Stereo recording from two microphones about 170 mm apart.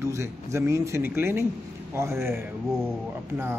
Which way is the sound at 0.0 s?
15° right (ahead or behind).